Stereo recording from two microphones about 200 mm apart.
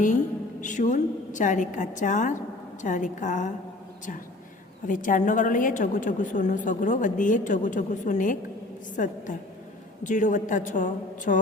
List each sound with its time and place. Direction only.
0.6 s a woman's voice: 40° left (ahead or behind)
4.9 s a woman's voice: 40° left (ahead or behind)
11.3 s a sound: 45° left (ahead or behind)